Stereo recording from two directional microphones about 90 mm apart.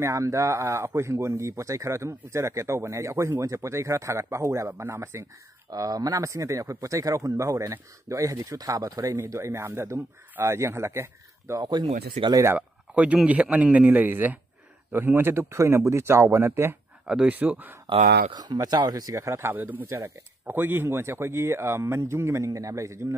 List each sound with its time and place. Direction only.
0.0 s speech: 35° right (ahead or behind)
5.7 s speech: 45° right (ahead or behind)
11.6 s speech: 60° right (ahead or behind)
12.5 s a man's voice: 15° right (ahead or behind)
17.0 s speech: 5° right (ahead or behind)
17.3 s speech: 20° right (ahead or behind)
17.8 s speech: 55° right (ahead or behind); by 23.1 s 35° right (ahead or behind)